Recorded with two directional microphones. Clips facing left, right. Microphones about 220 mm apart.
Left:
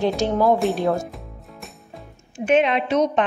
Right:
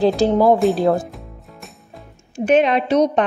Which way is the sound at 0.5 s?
Centre (ahead or behind).